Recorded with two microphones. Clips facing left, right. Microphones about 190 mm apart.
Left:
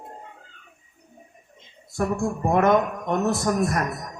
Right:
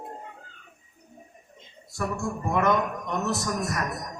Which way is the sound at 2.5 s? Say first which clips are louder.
Left 5 dB; 50° left (ahead or behind).